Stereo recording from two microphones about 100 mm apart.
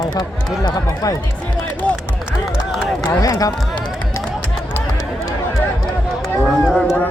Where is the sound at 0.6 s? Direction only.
45° left (ahead or behind).